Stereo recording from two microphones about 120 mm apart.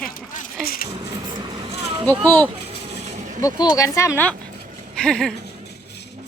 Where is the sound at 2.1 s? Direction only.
15° left (ahead or behind).